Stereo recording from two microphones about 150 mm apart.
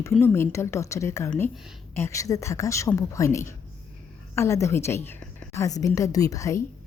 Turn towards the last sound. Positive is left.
turn(degrees=20)  # may be behind; listen again after turning